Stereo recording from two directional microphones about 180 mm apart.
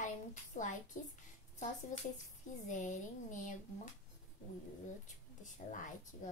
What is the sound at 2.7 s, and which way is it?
Speech, 45° left (ahead or behind).